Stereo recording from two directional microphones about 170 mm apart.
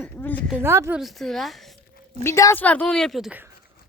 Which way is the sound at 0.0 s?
10° left (ahead or behind).